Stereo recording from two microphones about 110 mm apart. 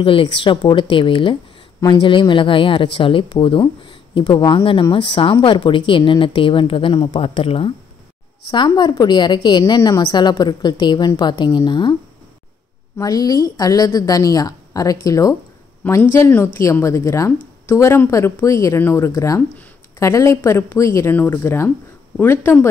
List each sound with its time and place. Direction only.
0.0 s speech: 50° left (ahead or behind)
8.5 s a woman's voice: 40° left (ahead or behind)
13.0 s a woman's voice: 35° left (ahead or behind)